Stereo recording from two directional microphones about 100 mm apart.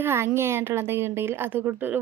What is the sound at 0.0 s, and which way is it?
A woman's voice, 25° right (ahead or behind).